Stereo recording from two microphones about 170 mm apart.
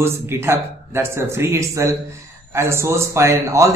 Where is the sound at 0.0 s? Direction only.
15° right (ahead or behind).